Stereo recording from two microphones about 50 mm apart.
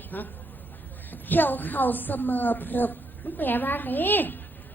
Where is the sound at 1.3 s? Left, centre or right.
Left.